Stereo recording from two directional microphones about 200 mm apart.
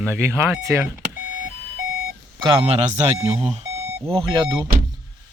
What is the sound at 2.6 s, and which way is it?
Speech, 30° right (ahead or behind).